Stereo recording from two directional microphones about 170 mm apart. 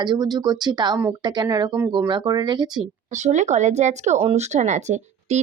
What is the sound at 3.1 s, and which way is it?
Speech, 45° right (ahead or behind).